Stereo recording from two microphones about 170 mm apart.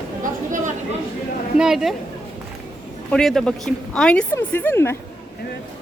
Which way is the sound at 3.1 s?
Centre (ahead or behind).